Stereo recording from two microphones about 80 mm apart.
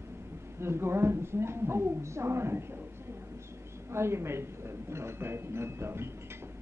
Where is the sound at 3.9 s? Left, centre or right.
Right.